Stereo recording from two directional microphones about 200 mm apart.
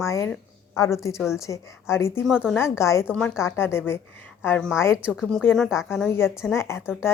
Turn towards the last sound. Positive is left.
turn(degrees=15)  # may be behind; listen again after turning